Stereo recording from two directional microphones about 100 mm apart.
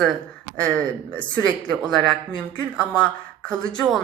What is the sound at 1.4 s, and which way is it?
A woman's voice, 15° left (ahead or behind).